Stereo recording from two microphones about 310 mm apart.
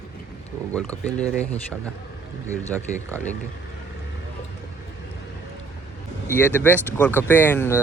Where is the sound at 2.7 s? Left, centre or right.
Centre.